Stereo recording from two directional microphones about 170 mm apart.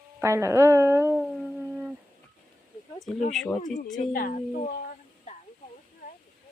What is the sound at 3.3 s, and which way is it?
Speech, centre (ahead or behind).